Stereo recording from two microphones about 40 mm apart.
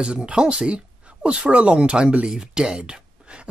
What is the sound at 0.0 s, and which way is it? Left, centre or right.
Speech, right.